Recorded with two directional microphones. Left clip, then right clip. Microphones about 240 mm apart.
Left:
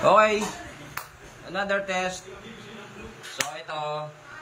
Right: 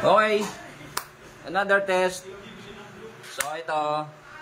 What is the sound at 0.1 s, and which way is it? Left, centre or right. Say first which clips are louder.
Speech: left 1 dB; centre.